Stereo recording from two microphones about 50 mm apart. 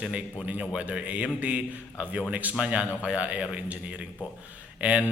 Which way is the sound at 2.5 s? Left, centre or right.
Right.